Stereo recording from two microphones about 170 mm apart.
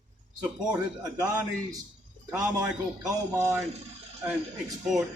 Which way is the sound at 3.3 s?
15° right (ahead or behind).